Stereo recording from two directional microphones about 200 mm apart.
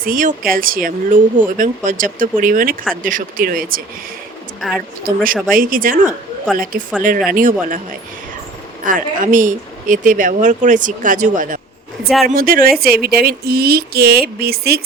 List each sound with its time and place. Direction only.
0.0 s speech: 45° right (ahead or behind)
5.0 s speech: 45° right (ahead or behind)
8.8 s speech: 40° right (ahead or behind)
12.0 s speech: centre (ahead or behind)
12.3 s speech: 45° right (ahead or behind)